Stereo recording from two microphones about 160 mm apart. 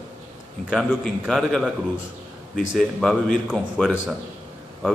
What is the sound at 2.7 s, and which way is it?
Speech, centre (ahead or behind).